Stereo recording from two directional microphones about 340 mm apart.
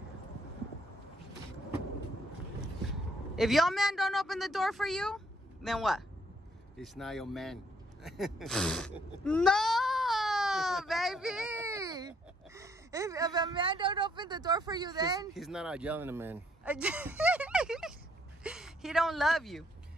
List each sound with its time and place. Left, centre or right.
2.6 s a man's voice: centre
8.0 s a sound: centre
12.5 s speech: centre
15.3 s speech: centre
18.4 s gasp: centre